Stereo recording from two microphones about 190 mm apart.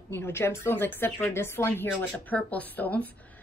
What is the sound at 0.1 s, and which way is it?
A woman's voice, 10° left (ahead or behind).